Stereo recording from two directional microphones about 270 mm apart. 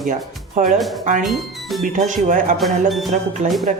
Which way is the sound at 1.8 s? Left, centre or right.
Right.